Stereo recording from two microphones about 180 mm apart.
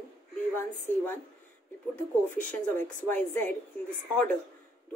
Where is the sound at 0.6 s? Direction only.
10° left (ahead or behind).